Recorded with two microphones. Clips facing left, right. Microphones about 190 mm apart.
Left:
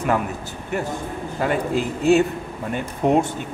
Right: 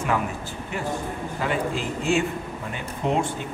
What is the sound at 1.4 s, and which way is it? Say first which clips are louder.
Speech: left 5 dB; 50° left (ahead or behind).